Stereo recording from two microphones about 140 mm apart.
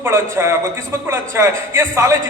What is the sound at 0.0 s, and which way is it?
A man's voice, 20° right (ahead or behind).